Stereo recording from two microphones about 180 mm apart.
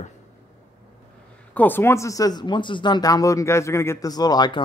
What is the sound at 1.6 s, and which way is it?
Speech, 10° left (ahead or behind).